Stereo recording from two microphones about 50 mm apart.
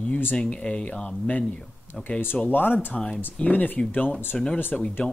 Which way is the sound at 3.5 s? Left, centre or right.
Left.